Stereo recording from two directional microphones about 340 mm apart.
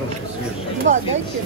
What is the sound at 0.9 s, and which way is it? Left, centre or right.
Speech, right.